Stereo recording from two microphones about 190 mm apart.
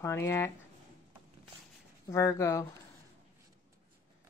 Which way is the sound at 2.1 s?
15° left (ahead or behind).